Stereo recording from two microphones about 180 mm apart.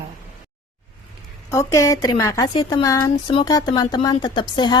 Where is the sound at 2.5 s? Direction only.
25° left (ahead or behind).